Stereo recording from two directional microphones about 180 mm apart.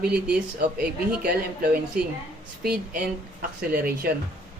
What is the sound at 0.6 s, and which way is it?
Speech, 60° right (ahead or behind).